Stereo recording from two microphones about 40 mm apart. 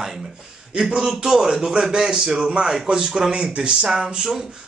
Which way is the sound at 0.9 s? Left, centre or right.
Centre.